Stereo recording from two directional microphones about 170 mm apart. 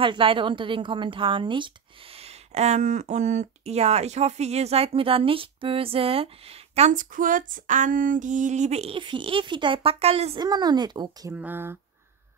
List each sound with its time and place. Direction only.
0.0 s a woman's voice: 30° right (ahead or behind)
10.4 s speech: 25° right (ahead or behind)
11.3 s speech: 10° right (ahead or behind)